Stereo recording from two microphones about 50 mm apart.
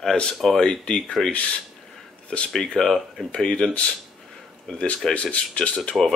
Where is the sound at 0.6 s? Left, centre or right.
Centre.